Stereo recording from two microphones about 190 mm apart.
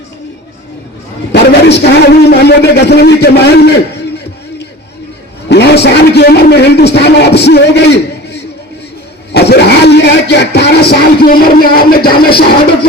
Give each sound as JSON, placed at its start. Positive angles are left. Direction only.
{"t": 1.3, "sound": "a man's voice", "side_deg": 60}
{"t": 5.5, "sound": "a man's voice", "side_deg": 60}